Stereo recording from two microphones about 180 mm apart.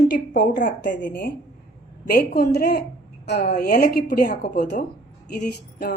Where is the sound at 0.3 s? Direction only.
60° left (ahead or behind).